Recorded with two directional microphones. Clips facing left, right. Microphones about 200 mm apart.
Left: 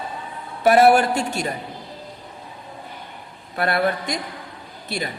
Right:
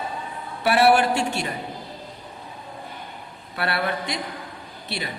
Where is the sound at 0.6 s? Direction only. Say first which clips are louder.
Left 4 dB; 45° left (ahead or behind).